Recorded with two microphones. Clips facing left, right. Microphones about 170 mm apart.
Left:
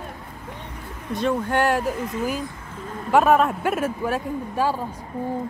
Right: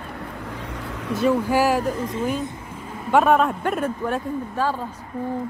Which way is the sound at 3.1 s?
Centre (ahead or behind).